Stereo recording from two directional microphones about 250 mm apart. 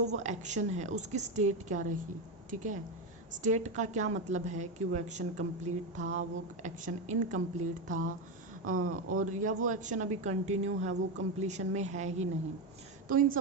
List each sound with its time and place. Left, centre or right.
0.1 s a woman's voice: right
8.6 s speech: right
9.1 s a woman's voice: right